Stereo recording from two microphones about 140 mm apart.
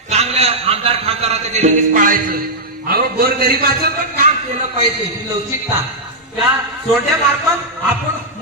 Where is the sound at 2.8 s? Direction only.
90° right.